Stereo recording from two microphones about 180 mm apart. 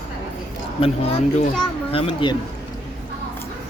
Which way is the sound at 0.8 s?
35° left (ahead or behind).